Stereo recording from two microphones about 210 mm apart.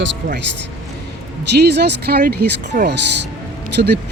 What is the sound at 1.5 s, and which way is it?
Speech, 50° right (ahead or behind).